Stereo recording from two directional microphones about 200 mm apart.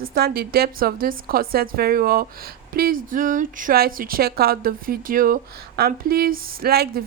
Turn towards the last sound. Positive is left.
turn(degrees=-50)  # may be behind; listen again after turning